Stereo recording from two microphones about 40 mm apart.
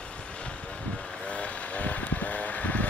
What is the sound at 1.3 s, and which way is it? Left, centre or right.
Vehicle, left.